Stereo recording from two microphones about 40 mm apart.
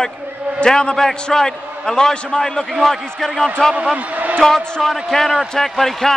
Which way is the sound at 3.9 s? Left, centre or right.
Right.